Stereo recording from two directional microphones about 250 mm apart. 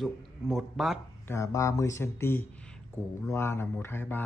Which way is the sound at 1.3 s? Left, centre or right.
Centre.